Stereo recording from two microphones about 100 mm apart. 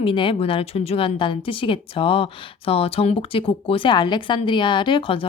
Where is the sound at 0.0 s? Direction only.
60° left (ahead or behind).